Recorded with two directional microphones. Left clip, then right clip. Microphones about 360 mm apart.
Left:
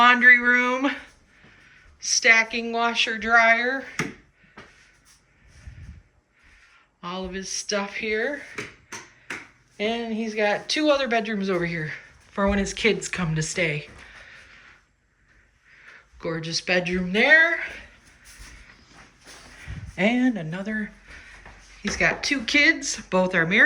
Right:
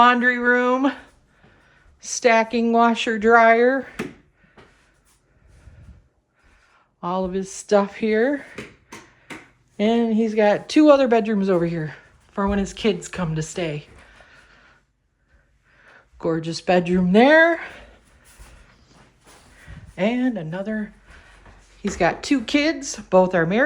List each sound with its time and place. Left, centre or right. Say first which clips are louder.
0.0 s speech: left 1 dB; centre
7.0 s speech: right 8 dB; centre
9.7 s speech: right 7 dB; centre
16.2 s speech: right 5 dB; centre
19.6 s a sound: even; centre
21.9 s speech: right 2 dB; centre